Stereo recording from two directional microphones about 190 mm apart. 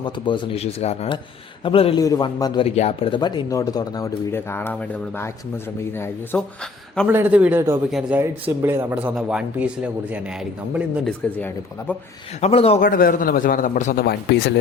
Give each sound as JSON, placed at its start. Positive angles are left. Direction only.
{"t": 0.0, "sound": "speech", "side_deg": 25}
{"t": 7.1, "sound": "speech", "side_deg": -10}
{"t": 11.3, "sound": "speech", "side_deg": 10}
{"t": 12.4, "sound": "speech", "side_deg": 30}
{"t": 12.8, "sound": "a man's voice", "side_deg": 45}
{"t": 14.0, "sound": "speech", "side_deg": 60}